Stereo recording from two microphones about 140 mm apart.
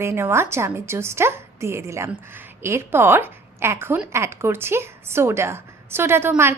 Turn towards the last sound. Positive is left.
turn(degrees=-15)  # may be behind; listen again after turning